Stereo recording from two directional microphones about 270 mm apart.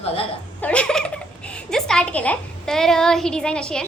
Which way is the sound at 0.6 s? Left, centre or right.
Centre.